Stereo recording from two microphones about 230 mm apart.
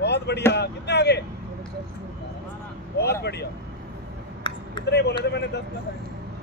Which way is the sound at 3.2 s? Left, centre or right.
Left.